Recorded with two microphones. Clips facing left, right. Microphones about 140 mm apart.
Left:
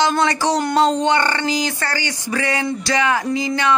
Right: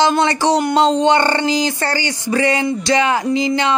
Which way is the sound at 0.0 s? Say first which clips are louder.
Right 3 dB; 25° right (ahead or behind).